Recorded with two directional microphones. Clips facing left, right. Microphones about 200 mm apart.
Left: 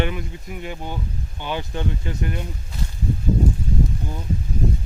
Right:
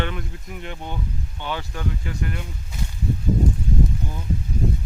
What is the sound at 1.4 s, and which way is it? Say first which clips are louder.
Speech: left 3 dB; 15° left (ahead or behind).